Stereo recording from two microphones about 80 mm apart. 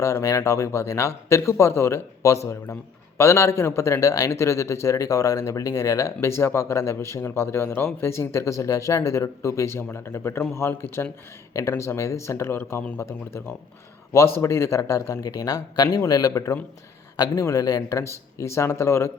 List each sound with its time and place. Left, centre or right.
0.0 s a man's voice: left